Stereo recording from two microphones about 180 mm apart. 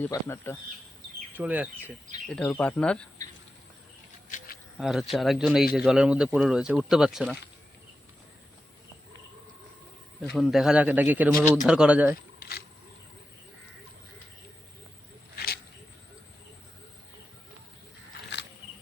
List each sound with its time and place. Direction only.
0.0 s speech: 10° left (ahead or behind)
1.4 s a man's voice: 10° right (ahead or behind)
2.3 s speech: 5° left (ahead or behind)
4.3 s insect: 45° left (ahead or behind)
4.8 s speech: centre (ahead or behind)
10.3 s a man's voice: centre (ahead or behind)
12.4 s a sound: 60° left (ahead or behind)
15.4 s a sound: 65° left (ahead or behind)